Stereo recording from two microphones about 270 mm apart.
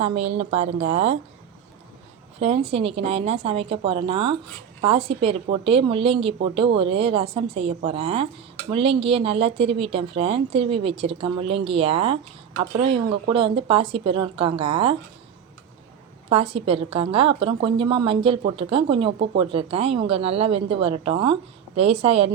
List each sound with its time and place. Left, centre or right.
0.0 s a woman's voice: right
2.4 s a woman's voice: right
16.3 s a woman's voice: centre